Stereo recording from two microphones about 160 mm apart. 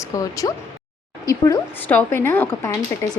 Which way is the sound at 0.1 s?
20° left (ahead or behind).